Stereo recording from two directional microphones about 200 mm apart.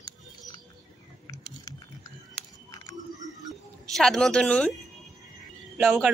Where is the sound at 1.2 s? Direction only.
20° left (ahead or behind).